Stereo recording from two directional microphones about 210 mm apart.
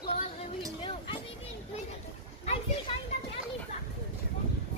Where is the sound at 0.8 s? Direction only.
25° left (ahead or behind).